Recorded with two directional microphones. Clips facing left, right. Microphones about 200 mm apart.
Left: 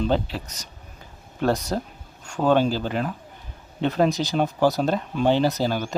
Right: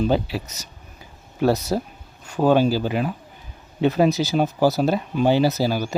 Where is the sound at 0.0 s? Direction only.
10° right (ahead or behind).